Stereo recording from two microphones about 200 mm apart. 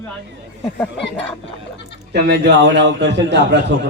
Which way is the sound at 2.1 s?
55° right (ahead or behind).